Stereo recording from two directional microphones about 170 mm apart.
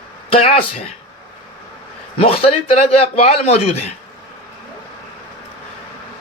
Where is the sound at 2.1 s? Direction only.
35° left (ahead or behind).